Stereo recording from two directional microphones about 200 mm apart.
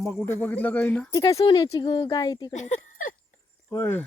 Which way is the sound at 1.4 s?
25° left (ahead or behind).